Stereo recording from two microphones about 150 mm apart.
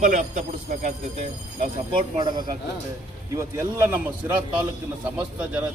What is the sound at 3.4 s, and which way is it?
Speech, 15° right (ahead or behind).